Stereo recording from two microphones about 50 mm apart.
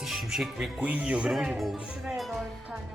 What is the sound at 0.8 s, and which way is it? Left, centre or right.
Speech, right.